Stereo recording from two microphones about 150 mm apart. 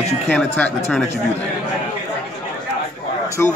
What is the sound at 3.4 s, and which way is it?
Speech, 15° left (ahead or behind).